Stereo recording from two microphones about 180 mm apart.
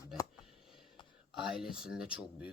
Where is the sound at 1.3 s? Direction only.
Centre (ahead or behind).